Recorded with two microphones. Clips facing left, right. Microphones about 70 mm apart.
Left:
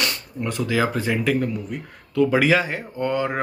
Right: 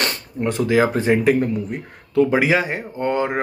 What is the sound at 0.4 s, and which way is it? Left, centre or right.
Speech, right.